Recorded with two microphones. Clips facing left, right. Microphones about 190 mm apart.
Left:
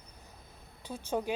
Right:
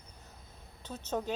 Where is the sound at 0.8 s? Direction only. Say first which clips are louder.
Left 2 dB; 10° left (ahead or behind).